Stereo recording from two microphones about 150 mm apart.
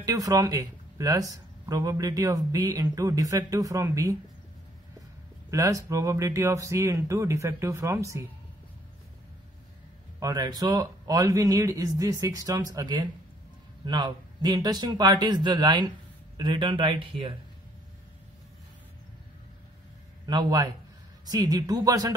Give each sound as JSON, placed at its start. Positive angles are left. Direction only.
{"t": 0.0, "sound": "speech", "side_deg": -25}
{"t": 5.5, "sound": "speech", "side_deg": -20}
{"t": 10.2, "sound": "speech", "side_deg": -30}
{"t": 20.2, "sound": "speech", "side_deg": -25}